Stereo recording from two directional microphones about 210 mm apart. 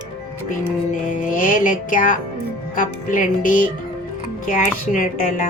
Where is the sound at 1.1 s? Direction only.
40° left (ahead or behind).